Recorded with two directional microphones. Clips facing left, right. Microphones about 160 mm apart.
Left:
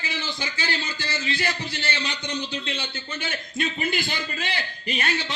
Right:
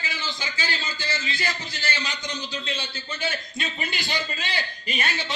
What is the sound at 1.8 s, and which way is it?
Speech, 30° left (ahead or behind).